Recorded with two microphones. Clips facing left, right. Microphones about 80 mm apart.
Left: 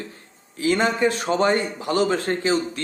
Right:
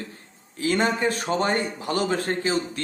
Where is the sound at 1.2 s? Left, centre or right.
Left.